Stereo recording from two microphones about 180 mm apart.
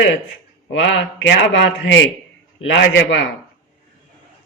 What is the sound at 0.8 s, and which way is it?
A man's voice, 75° left (ahead or behind).